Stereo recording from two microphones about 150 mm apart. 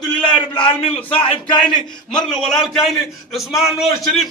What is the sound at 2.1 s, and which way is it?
Speech, 5° left (ahead or behind).